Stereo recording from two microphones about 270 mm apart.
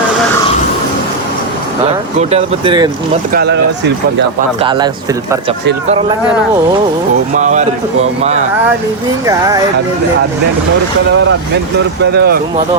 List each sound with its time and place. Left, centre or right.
2.1 s speech: right
3.3 s speech: right
4.6 s speech: centre
7.3 s speech: right
12.1 s speech: right